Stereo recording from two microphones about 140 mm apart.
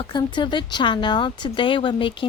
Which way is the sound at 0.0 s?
35° left (ahead or behind).